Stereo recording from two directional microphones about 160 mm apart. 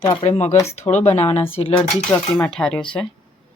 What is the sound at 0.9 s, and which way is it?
Speech, 40° left (ahead or behind).